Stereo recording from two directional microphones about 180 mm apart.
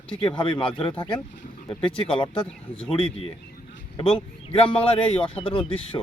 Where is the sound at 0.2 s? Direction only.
30° left (ahead or behind).